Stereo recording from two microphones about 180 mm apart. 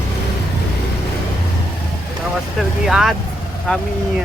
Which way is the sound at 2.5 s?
Centre (ahead or behind).